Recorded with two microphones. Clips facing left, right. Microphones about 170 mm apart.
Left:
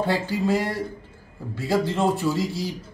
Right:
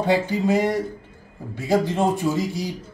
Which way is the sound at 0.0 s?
20° right (ahead or behind).